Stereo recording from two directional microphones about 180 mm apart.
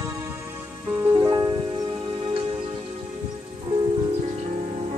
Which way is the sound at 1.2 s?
20° right (ahead or behind).